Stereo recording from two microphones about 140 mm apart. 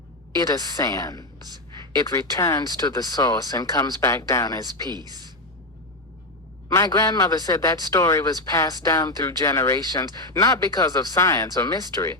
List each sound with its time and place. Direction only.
0.8 s a man's voice: 25° left (ahead or behind)
4.9 s a woman's voice: 30° right (ahead or behind)
6.7 s a man's voice: 25° left (ahead or behind)